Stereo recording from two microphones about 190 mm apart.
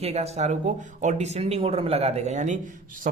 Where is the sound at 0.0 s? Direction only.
35° right (ahead or behind).